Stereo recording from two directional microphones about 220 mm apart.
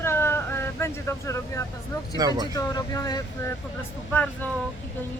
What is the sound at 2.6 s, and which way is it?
Speech, 15° left (ahead or behind).